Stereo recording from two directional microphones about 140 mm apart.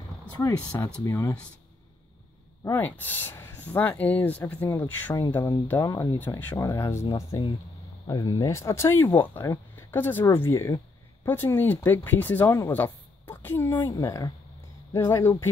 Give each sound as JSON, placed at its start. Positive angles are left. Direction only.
{"t": 0.6, "sound": "speech", "side_deg": 10}
{"t": 1.0, "sound": "speech", "side_deg": 20}
{"t": 2.6, "sound": "speech", "side_deg": 15}
{"t": 6.1, "sound": "speech", "side_deg": 15}